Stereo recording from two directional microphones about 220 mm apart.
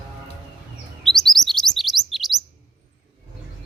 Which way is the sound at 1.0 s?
Centre (ahead or behind).